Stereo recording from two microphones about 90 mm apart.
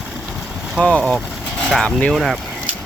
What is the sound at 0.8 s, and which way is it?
Speech, 5° right (ahead or behind).